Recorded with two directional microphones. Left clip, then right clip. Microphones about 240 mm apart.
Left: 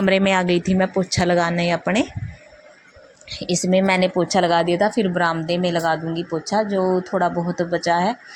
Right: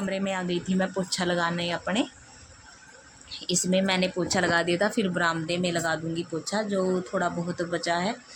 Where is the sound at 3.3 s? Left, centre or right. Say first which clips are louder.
Left 7 dB; left.